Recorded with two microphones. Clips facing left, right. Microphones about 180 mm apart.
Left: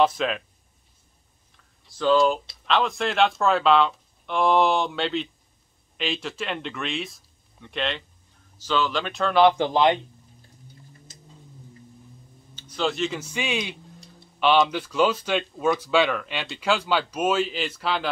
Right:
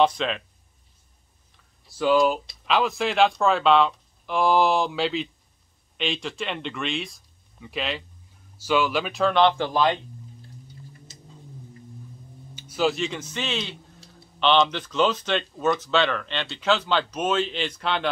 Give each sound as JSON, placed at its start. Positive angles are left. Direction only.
{"t": 0.0, "sound": "speech", "side_deg": 5}
{"t": 2.0, "sound": "speech", "side_deg": -10}
{"t": 9.4, "sound": "speech", "side_deg": 15}
{"t": 12.5, "sound": "speech", "side_deg": -10}
{"t": 13.9, "sound": "a sound", "side_deg": 0}
{"t": 14.4, "sound": "speech", "side_deg": 10}